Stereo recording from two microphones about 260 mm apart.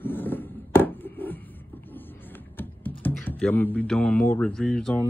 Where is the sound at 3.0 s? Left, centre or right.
Centre.